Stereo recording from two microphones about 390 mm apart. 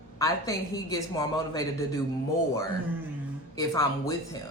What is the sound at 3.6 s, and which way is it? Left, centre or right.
Speech, centre.